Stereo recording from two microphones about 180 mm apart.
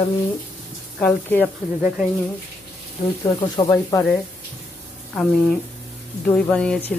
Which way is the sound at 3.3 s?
25° left (ahead or behind).